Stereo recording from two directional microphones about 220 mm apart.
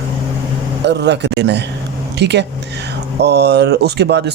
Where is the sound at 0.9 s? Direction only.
50° right (ahead or behind).